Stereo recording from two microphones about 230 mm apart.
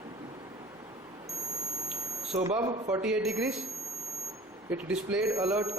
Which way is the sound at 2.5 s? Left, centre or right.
Centre.